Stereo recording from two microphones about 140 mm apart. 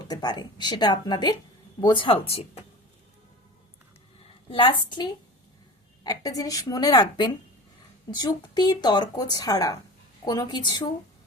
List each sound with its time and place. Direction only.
0.0 s speech: 30° left (ahead or behind)
4.4 s speech: 35° left (ahead or behind)